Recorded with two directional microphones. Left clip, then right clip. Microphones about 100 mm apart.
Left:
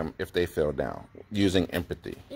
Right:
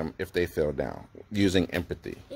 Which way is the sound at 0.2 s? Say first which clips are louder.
Even; 25° right (ahead or behind).